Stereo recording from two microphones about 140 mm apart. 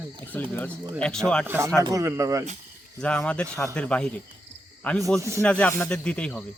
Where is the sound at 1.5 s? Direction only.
20° right (ahead or behind).